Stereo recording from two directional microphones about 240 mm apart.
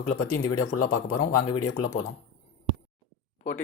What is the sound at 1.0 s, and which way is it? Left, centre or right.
Speech, left.